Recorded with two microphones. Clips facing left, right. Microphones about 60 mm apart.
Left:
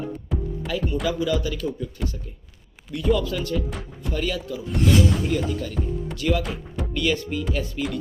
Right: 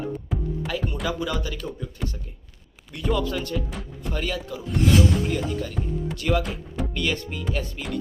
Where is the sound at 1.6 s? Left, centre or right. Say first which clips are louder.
Left 5 dB; right.